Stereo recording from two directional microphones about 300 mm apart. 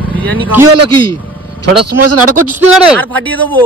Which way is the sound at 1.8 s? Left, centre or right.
Right.